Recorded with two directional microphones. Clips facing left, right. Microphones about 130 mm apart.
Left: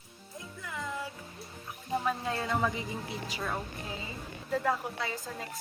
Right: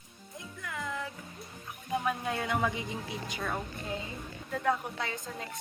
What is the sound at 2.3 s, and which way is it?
Speech, centre (ahead or behind).